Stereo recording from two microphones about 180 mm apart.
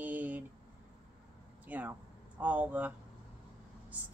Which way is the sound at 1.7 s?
10° right (ahead or behind).